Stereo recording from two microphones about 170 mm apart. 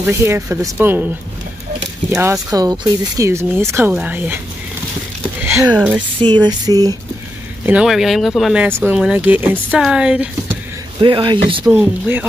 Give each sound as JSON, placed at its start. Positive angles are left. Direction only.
{"t": 0.0, "sound": "speech", "side_deg": -15}
{"t": 2.0, "sound": "speech", "side_deg": -15}
{"t": 5.4, "sound": "speech", "side_deg": -15}
{"t": 6.2, "sound": "a sound", "side_deg": -25}
{"t": 7.6, "sound": "speech", "side_deg": -5}
{"t": 8.6, "sound": "speech", "side_deg": -10}
{"t": 11.0, "sound": "a sound", "side_deg": -30}
{"t": 11.6, "sound": "speech", "side_deg": -10}